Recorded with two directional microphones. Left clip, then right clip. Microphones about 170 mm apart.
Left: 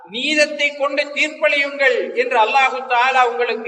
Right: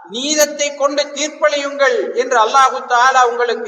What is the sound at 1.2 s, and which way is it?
Speech, centre (ahead or behind).